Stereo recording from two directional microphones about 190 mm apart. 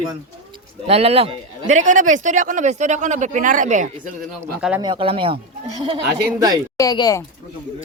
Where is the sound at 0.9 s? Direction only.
30° right (ahead or behind).